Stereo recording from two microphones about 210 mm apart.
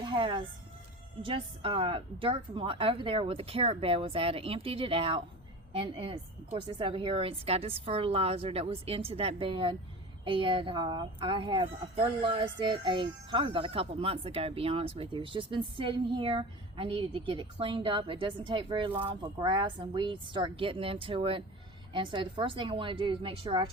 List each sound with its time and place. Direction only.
0.0 s speech: 20° right (ahead or behind)